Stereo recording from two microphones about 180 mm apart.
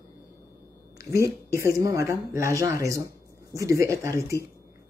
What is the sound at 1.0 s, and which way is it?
Speech, 15° right (ahead or behind).